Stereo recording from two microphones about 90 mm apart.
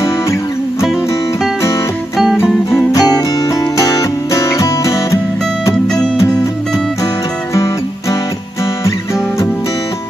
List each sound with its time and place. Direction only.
0.0 s music: 35° left (ahead or behind)
2.1 s music: centre (ahead or behind)
2.9 s music: 40° left (ahead or behind)
7.5 s music: 35° left (ahead or behind)